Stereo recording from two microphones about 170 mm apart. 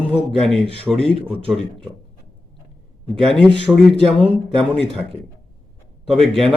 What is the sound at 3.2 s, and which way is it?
Speech, centre (ahead or behind).